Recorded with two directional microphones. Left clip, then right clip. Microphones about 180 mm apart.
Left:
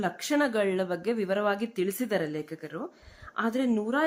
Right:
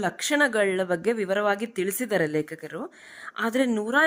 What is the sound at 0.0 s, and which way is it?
Speech, 40° right (ahead or behind).